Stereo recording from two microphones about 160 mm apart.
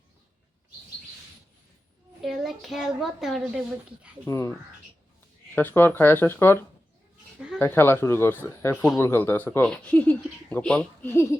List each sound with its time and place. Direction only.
2.2 s a woman's voice: centre (ahead or behind)
4.3 s speech: 20° left (ahead or behind)
5.5 s speech: 15° left (ahead or behind)
7.3 s a sound: 5° right (ahead or behind)
7.6 s speech: 15° left (ahead or behind)